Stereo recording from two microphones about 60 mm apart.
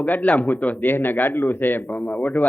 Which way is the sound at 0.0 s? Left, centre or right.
Left.